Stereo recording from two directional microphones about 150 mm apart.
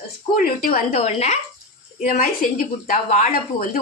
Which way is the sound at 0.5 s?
75° left (ahead or behind).